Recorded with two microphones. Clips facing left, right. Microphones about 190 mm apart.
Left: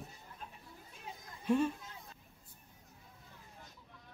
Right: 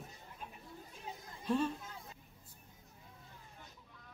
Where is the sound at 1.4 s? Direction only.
10° left (ahead or behind).